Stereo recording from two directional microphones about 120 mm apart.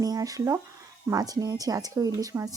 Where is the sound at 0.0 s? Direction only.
30° right (ahead or behind).